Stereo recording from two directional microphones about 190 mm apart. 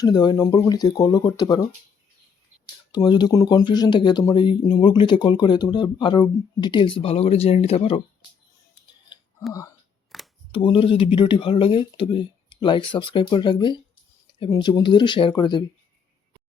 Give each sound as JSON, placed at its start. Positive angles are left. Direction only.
{"t": 0.0, "sound": "speech", "side_deg": 20}
{"t": 2.9, "sound": "speech", "side_deg": 25}
{"t": 9.5, "sound": "speech", "side_deg": 15}
{"t": 10.1, "sound": "camera", "side_deg": 0}
{"t": 10.5, "sound": "speech", "side_deg": 30}